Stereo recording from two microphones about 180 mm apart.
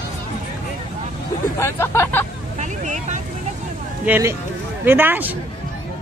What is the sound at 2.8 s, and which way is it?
Vehicle, 40° right (ahead or behind).